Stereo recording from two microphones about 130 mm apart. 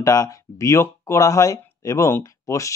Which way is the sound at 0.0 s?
25° left (ahead or behind).